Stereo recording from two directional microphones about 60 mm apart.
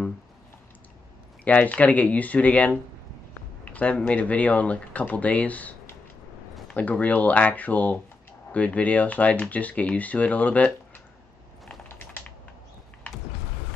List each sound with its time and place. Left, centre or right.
1.4 s speech: left
3.6 s a sound: left
4.1 s speech: left